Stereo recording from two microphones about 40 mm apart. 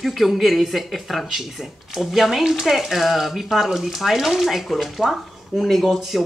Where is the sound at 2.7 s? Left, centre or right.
Centre.